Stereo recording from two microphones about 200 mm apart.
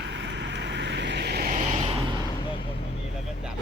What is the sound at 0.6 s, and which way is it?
Vehicle, 60° right (ahead or behind).